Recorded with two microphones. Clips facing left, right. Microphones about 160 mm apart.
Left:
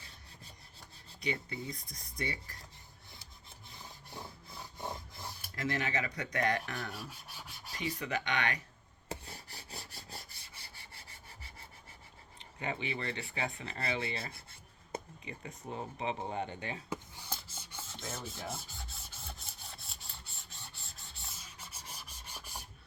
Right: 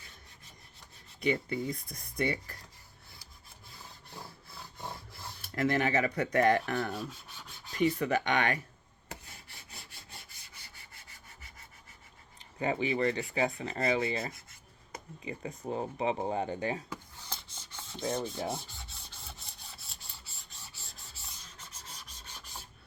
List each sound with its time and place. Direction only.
1.2 s speech: 55° right (ahead or behind)
5.5 s speech: 55° right (ahead or behind)
7.1 s rub: 10° left (ahead or behind)
7.9 s speech: 50° right (ahead or behind)
9.0 s rub: 35° left (ahead or behind)
12.4 s a sound: 35° right (ahead or behind)
12.9 s speech: 30° left (ahead or behind)
13.3 s speech: 35° right (ahead or behind)
14.0 s rub: 30° left (ahead or behind)
15.2 s speech: 30° right (ahead or behind)
17.2 s filing: 10° left (ahead or behind)
18.0 s speech: 35° right (ahead or behind)
18.5 s rub: centre (ahead or behind)